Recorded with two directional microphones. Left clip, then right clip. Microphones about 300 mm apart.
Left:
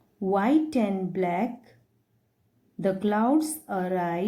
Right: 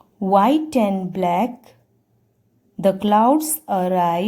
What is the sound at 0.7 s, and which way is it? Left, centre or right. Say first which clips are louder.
Speech: right 7 dB; right.